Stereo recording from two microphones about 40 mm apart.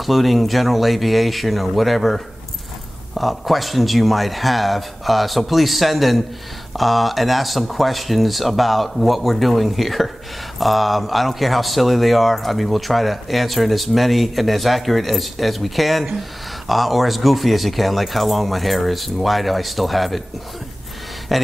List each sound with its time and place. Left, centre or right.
0.0 s speech: centre
21.3 s speech: centre